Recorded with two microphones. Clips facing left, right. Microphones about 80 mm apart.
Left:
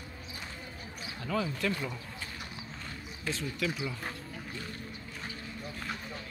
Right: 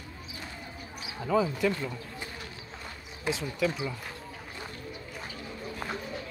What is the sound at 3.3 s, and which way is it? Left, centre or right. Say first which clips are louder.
Speech: right 5 dB; centre.